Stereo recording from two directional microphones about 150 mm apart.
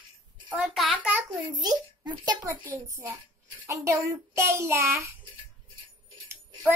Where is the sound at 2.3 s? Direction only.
25° right (ahead or behind).